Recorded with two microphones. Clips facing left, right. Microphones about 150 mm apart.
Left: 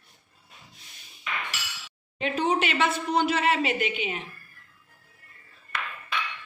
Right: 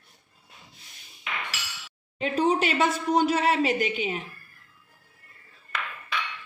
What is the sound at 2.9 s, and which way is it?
Speech, 10° right (ahead or behind).